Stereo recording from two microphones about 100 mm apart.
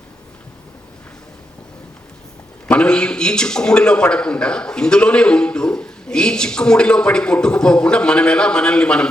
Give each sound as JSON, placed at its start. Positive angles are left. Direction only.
{"t": 2.6, "sound": "a man's voice", "side_deg": 10}